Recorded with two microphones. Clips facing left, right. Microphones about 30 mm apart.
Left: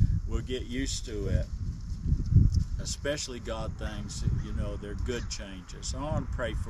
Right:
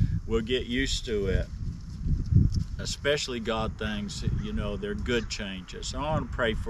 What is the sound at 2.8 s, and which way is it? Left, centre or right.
Speech, right.